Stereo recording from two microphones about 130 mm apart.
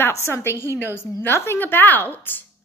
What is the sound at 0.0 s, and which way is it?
A woman's voice, 20° left (ahead or behind).